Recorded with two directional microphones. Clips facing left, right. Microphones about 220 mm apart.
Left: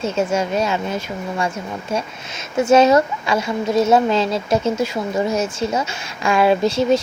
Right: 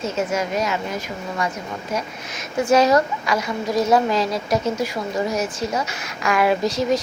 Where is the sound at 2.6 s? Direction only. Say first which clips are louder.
Left 3 dB; 25° left (ahead or behind).